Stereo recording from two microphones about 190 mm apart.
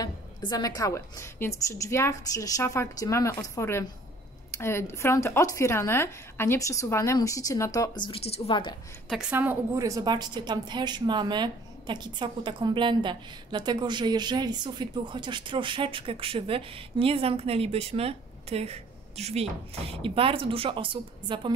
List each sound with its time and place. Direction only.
0.0 s speech: 20° left (ahead or behind)
9.1 s a woman's voice: 5° right (ahead or behind); by 21.5 s 25° right (ahead or behind)